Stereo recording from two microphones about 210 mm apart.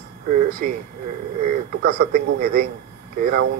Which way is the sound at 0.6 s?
40° right (ahead or behind).